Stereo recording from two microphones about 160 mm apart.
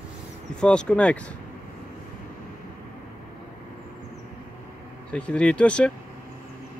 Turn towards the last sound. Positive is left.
turn(degrees=5)  # may be behind; listen again after turning